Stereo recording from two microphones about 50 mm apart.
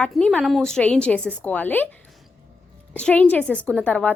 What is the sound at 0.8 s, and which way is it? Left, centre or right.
A woman's voice, left.